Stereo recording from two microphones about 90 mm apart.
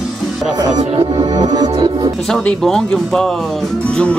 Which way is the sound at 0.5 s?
45° right (ahead or behind).